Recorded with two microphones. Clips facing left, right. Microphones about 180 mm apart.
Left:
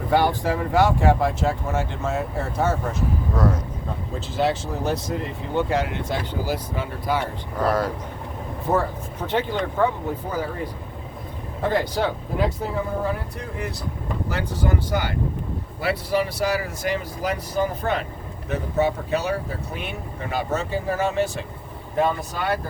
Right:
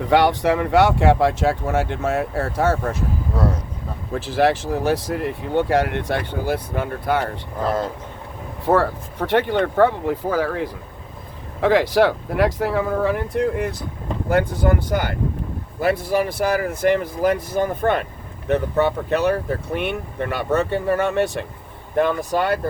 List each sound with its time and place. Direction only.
0.1 s speech: 75° right (ahead or behind)
3.3 s speech: 30° right (ahead or behind)
4.1 s speech: 70° right (ahead or behind)
8.6 s speech: 90° right; by 13.7 s 70° right (ahead or behind)
14.3 s speech: 55° right (ahead or behind)
18.4 s speech: 65° right (ahead or behind)